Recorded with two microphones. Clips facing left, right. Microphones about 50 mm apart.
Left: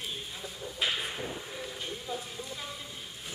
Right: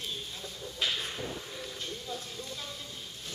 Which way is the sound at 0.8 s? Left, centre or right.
Left.